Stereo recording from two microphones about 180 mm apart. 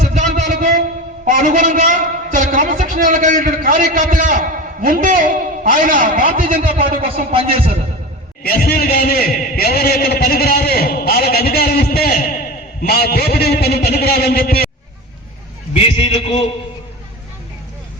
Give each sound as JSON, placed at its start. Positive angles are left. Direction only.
{"t": 0.0, "sound": "a sound", "side_deg": -45}
{"t": 1.2, "sound": "a man's voice", "side_deg": -45}
{"t": 6.7, "sound": "a man's voice", "side_deg": -30}
{"t": 8.4, "sound": "a man's voice", "side_deg": 55}
{"t": 15.7, "sound": "a man's voice", "side_deg": 35}